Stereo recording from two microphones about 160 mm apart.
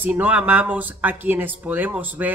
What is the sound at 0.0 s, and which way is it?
Speech, 10° right (ahead or behind).